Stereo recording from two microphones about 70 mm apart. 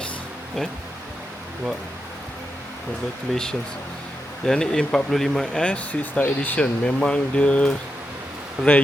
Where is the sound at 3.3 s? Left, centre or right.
Centre.